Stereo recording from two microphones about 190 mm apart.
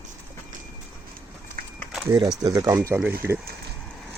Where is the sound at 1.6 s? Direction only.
50° right (ahead or behind).